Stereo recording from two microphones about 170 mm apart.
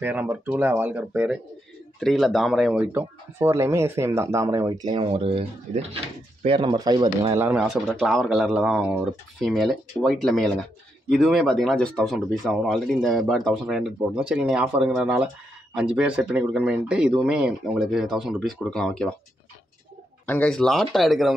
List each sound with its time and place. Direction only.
0.0 s speech: 10° right (ahead or behind); by 7.3 s 25° right (ahead or behind)
7.3 s speech: 5° right (ahead or behind)
20.2 s speech: 5° left (ahead or behind)